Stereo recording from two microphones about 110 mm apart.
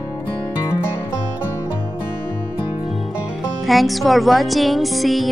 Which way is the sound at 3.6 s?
Centre (ahead or behind).